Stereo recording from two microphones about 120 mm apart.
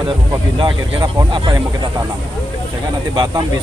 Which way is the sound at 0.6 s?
40° right (ahead or behind).